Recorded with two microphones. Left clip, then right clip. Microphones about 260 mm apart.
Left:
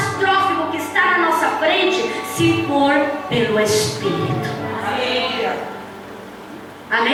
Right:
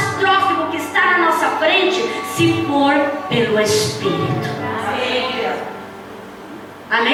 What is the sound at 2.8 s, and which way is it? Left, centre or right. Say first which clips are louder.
Speech: right 2 dB; centre.